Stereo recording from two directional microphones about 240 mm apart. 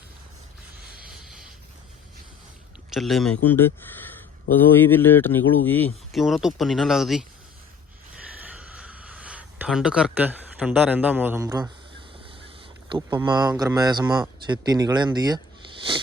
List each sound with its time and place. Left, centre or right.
2.9 s speech: centre
4.9 s speech: centre
8.4 s a sound: centre
12.9 s speech: centre